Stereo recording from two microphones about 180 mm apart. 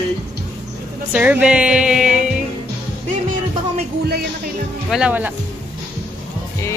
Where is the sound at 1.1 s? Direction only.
10° right (ahead or behind).